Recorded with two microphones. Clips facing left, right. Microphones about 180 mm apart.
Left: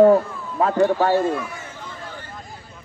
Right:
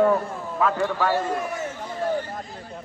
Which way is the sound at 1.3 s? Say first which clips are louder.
Right 1 dB; 45° right (ahead or behind).